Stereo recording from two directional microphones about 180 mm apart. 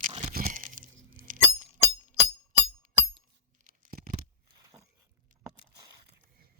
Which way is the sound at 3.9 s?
50° right (ahead or behind).